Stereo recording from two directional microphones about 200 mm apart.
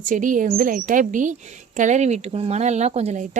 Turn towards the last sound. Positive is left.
turn(degrees=-35)  # may be behind; listen again after turning